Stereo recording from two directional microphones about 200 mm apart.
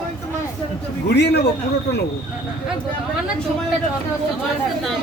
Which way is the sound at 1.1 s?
55° left (ahead or behind).